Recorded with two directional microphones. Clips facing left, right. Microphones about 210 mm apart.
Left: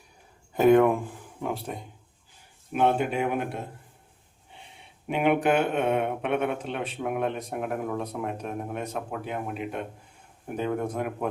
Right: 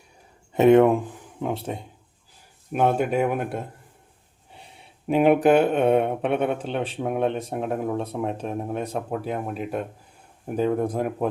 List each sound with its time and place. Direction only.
0.5 s speech: 25° right (ahead or behind)
2.7 s speech: 45° right (ahead or behind)
5.0 s speech: 35° right (ahead or behind)